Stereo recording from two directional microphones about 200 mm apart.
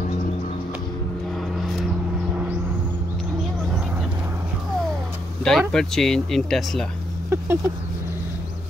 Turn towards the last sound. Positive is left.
turn(degrees=-10)  # may be behind; listen again after turning